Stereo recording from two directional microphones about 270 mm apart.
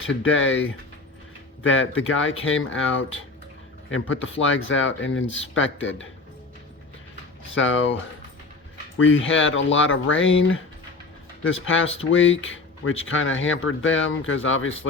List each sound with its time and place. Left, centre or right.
0.1 s speech: left
2.0 s speech: left
4.1 s speech: left
7.5 s speech: left
9.0 s speech: left